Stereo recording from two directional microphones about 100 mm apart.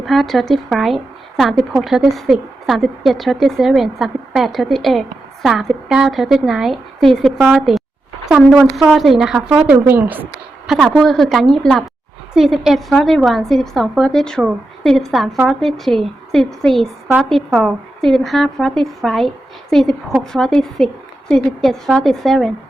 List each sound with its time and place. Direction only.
0.0 s speech: centre (ahead or behind)
9.8 s speech: 20° right (ahead or behind)
10.7 s speech: centre (ahead or behind)